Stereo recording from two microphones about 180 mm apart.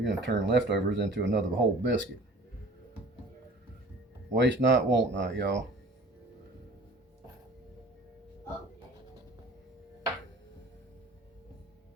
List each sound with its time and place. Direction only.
0.0 s speech: 75° right (ahead or behind)
1.5 s speech: 90° right
4.4 s speech: 85° right